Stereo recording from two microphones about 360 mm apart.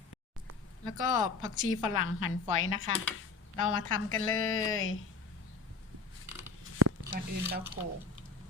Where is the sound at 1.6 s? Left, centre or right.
Left.